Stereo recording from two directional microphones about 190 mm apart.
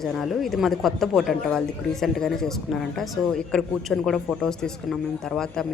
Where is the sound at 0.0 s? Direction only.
Centre (ahead or behind).